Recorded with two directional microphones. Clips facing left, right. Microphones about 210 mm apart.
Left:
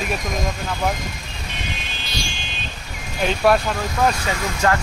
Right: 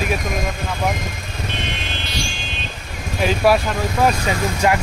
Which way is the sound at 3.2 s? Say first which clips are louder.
Right 1 dB; 5° right (ahead or behind).